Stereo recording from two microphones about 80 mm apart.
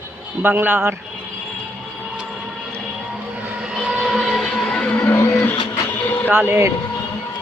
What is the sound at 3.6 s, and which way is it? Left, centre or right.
Vehicle, centre.